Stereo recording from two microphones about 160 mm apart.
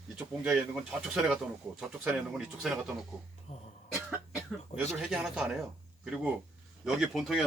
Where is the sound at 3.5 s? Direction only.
40° left (ahead or behind).